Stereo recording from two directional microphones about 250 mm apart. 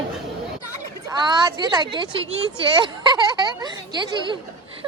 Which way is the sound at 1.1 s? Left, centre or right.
Centre.